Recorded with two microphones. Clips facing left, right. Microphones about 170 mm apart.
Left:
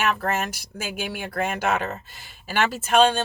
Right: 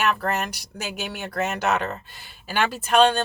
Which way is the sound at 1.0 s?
10° left (ahead or behind).